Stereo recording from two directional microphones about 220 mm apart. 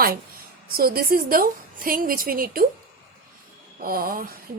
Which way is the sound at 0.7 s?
45° right (ahead or behind).